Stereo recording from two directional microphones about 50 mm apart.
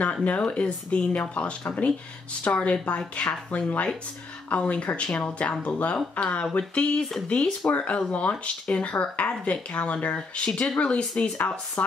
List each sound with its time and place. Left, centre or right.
0.0 s speech: left